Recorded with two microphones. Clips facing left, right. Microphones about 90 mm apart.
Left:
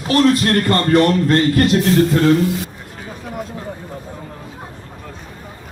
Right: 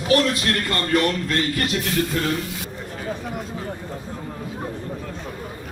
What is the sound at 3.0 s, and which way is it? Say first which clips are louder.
Speech: left 1 dB; centre (ahead or behind).